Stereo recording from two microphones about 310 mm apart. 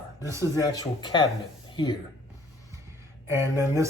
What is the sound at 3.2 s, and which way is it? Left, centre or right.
Speech, centre.